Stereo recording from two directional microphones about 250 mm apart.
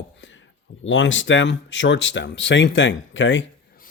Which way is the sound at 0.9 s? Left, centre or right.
Left.